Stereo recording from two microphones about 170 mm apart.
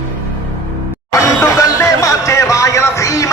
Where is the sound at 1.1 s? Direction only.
20° left (ahead or behind).